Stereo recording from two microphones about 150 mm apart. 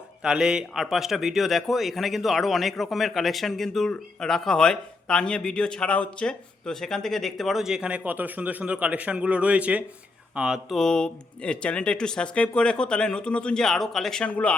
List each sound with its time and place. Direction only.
0.2 s a man's voice: 5° right (ahead or behind)